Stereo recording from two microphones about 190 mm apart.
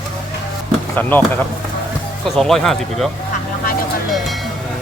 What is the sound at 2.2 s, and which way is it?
Speech, centre (ahead or behind).